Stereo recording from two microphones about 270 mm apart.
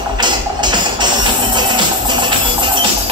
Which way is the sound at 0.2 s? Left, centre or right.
Centre.